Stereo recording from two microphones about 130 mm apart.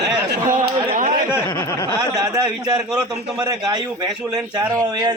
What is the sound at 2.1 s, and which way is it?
A man's voice, 30° right (ahead or behind).